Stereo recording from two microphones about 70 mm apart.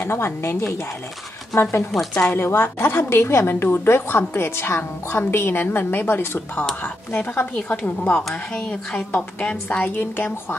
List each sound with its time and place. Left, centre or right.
0.0 s a woman's voice: left
1.9 s a woman's voice: centre
2.3 s a woman's voice: left